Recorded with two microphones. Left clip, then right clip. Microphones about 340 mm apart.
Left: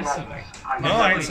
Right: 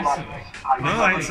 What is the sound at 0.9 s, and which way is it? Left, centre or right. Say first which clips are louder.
Speech: left 3 dB; left.